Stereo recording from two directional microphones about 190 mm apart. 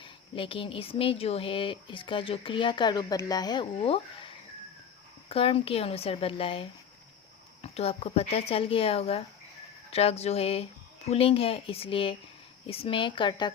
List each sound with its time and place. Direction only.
0.0 s speech: 30° left (ahead or behind)